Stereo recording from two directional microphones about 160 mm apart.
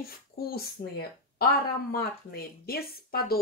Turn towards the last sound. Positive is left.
turn(degrees=70)  # may be behind; listen again after turning